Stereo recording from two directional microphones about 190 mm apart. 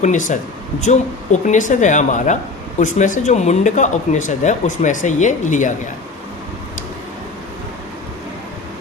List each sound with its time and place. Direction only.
0.0 s speech: 40° left (ahead or behind)